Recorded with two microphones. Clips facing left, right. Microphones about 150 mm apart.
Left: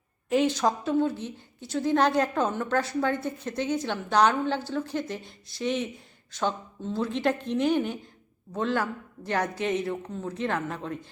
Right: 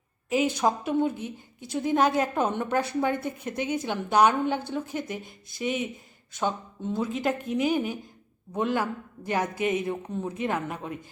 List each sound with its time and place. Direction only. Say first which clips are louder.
0.3 s speech: left 1 dB; 10° right (ahead or behind)
5.2 s speech: even; 50° right (ahead or behind)
5.6 s speech: left 1 dB; 10° right (ahead or behind)
7.0 s speech: left 2 dB; 5° right (ahead or behind)